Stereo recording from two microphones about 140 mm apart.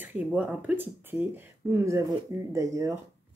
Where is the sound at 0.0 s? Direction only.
10° right (ahead or behind).